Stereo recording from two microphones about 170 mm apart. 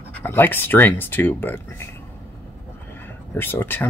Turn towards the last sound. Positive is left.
turn(degrees=10)  # may be behind; listen again after turning